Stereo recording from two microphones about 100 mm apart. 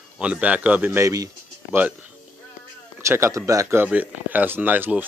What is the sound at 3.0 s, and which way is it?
Speech, 25° right (ahead or behind).